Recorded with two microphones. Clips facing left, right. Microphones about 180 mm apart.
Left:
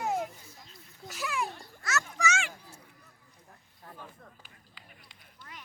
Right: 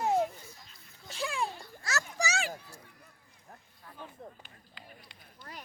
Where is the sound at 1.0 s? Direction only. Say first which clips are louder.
Even; 30° right (ahead or behind).